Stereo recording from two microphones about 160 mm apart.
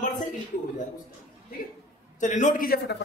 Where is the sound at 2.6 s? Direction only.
85° left.